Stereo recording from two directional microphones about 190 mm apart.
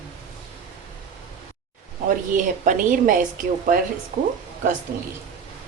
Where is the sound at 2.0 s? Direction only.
45° right (ahead or behind).